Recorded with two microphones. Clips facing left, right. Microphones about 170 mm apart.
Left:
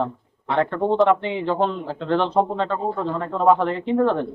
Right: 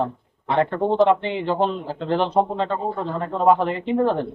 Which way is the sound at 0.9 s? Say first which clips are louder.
Even; centre (ahead or behind).